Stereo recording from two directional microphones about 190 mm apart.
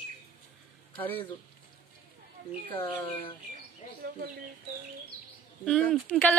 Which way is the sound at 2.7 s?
25° left (ahead or behind).